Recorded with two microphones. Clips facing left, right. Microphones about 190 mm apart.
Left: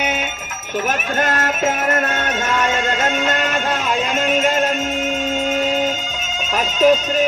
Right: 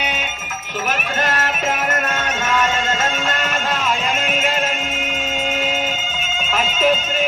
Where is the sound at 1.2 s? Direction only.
45° left (ahead or behind).